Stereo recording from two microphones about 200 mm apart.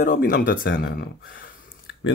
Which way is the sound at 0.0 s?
45° left (ahead or behind).